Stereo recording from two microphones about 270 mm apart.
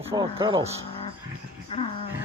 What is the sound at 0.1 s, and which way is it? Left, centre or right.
Speech, centre.